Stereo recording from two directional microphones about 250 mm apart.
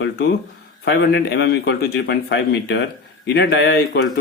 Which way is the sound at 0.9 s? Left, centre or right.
Left.